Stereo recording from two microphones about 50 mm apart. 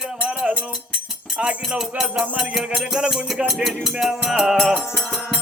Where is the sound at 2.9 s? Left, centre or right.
Centre.